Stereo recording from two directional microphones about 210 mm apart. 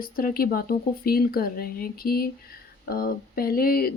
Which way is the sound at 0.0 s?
45° left (ahead or behind).